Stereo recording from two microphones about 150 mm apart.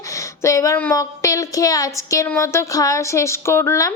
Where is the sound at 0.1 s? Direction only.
20° left (ahead or behind).